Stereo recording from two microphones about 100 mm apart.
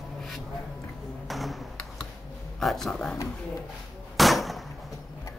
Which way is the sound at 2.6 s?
Centre (ahead or behind).